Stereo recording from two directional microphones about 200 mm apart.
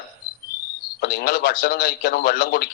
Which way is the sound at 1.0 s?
50° left (ahead or behind).